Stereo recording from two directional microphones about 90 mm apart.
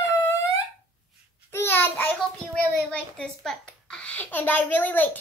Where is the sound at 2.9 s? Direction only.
10° left (ahead or behind).